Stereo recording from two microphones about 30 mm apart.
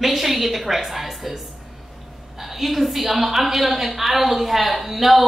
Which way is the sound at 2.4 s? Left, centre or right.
Centre.